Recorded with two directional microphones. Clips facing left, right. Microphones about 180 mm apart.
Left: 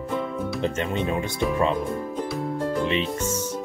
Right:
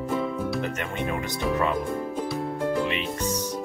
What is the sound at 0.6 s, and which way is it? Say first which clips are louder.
Speech: left 4 dB; 25° left (ahead or behind).